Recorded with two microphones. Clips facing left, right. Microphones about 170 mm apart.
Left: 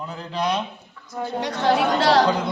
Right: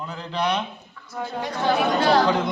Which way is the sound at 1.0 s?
20° left (ahead or behind).